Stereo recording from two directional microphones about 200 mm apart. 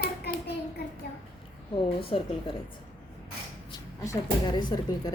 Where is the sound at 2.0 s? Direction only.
30° left (ahead or behind).